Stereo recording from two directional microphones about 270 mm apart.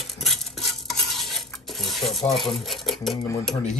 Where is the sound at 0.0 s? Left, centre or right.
Centre.